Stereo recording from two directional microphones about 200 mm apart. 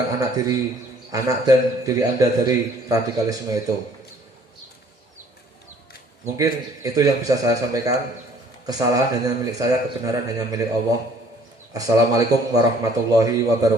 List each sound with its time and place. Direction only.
0.1 s a man's voice: 20° right (ahead or behind)
6.2 s a man's voice: 15° right (ahead or behind)
11.7 s a man's voice: 15° right (ahead or behind)